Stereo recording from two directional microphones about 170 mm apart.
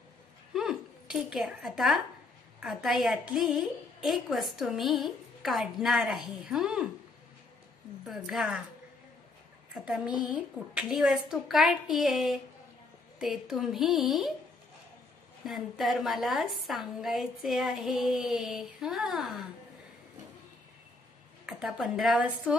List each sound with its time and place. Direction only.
0.5 s a sound: centre (ahead or behind)
2.6 s a woman's voice: centre (ahead or behind)
8.0 s a woman's voice: centre (ahead or behind)
9.8 s a woman's voice: 5° right (ahead or behind)
15.4 s a woman's voice: centre (ahead or behind)
21.5 s a woman's voice: 5° right (ahead or behind)